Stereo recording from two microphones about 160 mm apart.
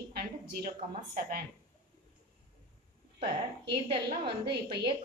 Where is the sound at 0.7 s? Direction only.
65° right (ahead or behind).